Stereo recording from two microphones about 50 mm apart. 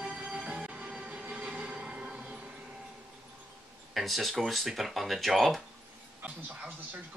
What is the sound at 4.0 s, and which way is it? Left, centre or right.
Speech, centre.